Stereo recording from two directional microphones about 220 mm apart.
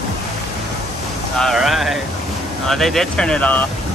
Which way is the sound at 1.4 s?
Centre (ahead or behind).